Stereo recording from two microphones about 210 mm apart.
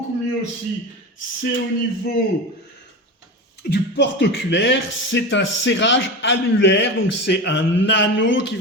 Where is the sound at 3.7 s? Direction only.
55° left (ahead or behind).